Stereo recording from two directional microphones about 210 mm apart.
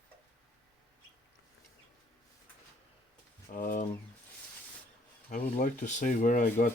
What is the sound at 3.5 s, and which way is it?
Pigeon, 40° left (ahead or behind).